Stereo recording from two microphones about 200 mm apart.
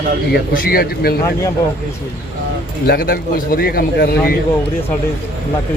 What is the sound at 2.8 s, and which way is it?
Speech, 50° left (ahead or behind).